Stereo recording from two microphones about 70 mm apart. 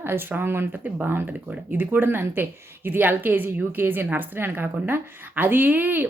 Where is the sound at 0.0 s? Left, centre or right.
Right.